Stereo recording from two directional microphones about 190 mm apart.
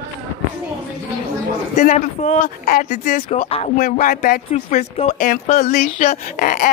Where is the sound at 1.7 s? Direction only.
40° left (ahead or behind).